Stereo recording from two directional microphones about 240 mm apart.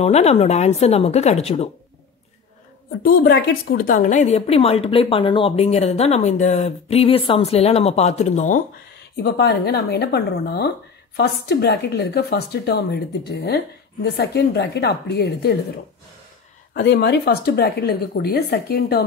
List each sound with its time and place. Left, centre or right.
0.0 s a woman's voice: left
3.0 s a woman's voice: left
9.1 s a woman's voice: left
16.7 s speech: left